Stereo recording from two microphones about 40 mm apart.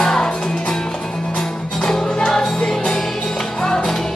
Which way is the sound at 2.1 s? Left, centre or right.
Centre.